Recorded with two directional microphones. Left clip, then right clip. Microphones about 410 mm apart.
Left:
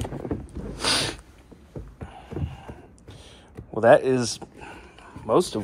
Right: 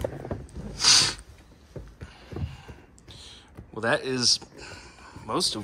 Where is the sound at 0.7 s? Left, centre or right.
Centre.